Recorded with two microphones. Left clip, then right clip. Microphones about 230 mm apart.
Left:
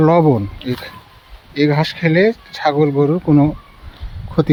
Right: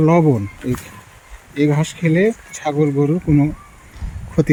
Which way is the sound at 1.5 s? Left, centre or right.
Centre.